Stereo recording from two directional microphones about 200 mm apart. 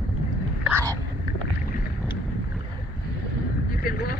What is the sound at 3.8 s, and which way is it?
Vehicle, 50° left (ahead or behind).